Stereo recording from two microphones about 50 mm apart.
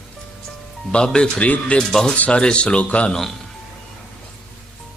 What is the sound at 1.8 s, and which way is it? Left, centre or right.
Speech, centre.